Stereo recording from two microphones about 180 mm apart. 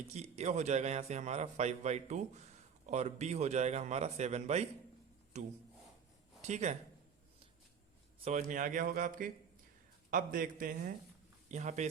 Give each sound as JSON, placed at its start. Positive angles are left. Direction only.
{"t": 0.1, "sound": "a man's voice", "side_deg": -40}
{"t": 8.2, "sound": "a man's voice", "side_deg": -40}